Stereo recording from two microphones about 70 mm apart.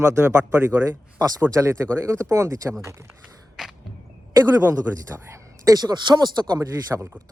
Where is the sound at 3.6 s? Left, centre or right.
Centre.